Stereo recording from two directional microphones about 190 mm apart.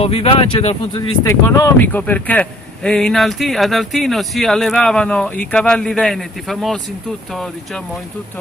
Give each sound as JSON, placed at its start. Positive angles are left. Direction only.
{"t": 0.0, "sound": "speech", "side_deg": 30}
{"t": 1.2, "sound": "speech", "side_deg": 15}